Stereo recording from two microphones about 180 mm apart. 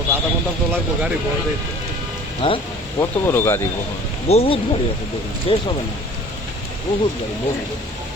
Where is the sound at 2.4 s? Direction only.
30° left (ahead or behind).